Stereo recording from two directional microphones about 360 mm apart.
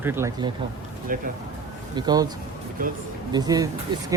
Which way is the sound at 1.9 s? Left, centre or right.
Centre.